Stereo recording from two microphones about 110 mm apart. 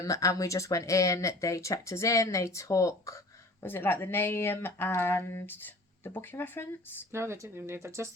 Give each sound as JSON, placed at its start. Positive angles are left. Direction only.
{"t": 0.0, "sound": "speech", "side_deg": 30}
{"t": 7.1, "sound": "speech", "side_deg": -25}